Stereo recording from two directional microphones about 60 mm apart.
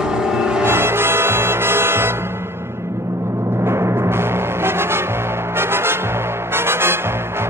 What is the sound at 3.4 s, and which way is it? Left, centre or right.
Timpani, right.